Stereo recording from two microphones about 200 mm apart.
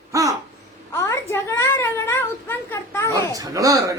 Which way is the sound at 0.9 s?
15° left (ahead or behind).